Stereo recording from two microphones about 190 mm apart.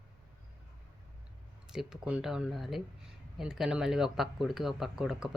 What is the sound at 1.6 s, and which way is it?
Speech, 5° right (ahead or behind).